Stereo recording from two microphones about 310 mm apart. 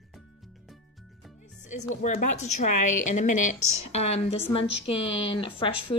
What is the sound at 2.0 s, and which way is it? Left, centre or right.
A woman's voice, left.